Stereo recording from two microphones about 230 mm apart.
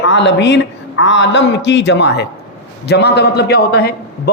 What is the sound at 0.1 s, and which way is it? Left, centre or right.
A man's voice, left.